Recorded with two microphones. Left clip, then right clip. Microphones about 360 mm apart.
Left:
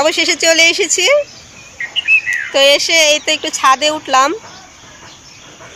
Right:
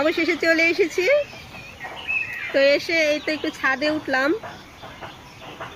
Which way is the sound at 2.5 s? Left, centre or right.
Left.